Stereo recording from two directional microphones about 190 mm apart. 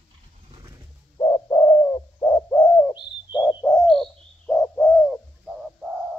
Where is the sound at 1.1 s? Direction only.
25° left (ahead or behind).